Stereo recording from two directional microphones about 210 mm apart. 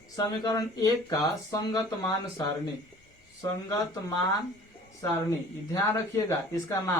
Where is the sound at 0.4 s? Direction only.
15° left (ahead or behind).